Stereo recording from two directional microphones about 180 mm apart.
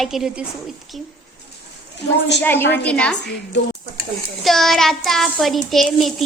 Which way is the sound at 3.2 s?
70° left (ahead or behind).